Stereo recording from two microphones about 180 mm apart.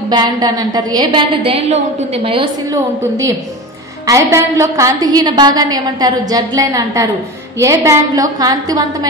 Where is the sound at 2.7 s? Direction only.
20° right (ahead or behind).